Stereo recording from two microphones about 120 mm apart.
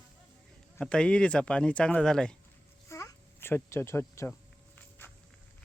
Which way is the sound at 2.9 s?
20° left (ahead or behind).